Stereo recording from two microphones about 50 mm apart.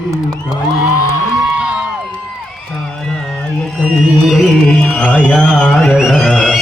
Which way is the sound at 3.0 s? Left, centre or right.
Centre.